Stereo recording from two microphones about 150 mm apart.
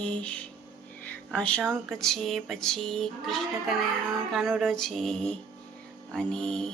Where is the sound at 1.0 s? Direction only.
10° left (ahead or behind).